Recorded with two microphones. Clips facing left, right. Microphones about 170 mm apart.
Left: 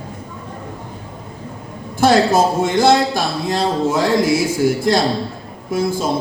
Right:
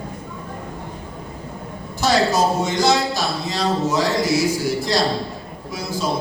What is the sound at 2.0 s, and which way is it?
Speech, 55° left (ahead or behind).